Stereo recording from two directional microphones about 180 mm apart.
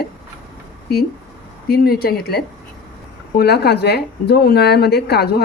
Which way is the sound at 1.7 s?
55° left (ahead or behind).